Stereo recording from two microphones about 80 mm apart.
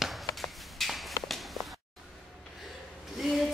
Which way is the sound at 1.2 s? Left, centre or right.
Centre.